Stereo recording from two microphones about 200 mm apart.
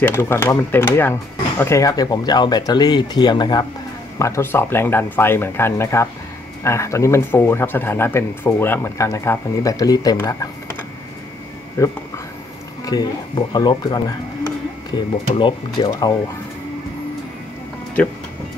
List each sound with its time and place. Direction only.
0.0 s speech: 10° left (ahead or behind)
11.8 s speech: 15° left (ahead or behind)